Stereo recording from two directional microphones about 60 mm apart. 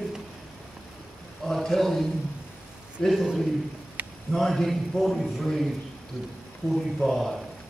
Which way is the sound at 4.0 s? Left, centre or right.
Right.